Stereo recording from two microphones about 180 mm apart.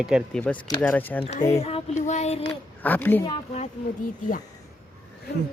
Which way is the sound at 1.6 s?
35° left (ahead or behind).